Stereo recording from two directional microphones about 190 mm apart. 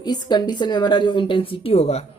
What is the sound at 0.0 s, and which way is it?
A woman's voice, 20° left (ahead or behind).